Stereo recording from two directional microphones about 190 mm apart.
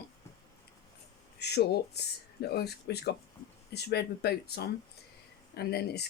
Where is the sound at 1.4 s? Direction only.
60° left (ahead or behind).